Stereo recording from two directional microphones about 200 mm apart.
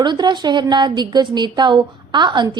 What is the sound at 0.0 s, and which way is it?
A woman's voice, 20° right (ahead or behind).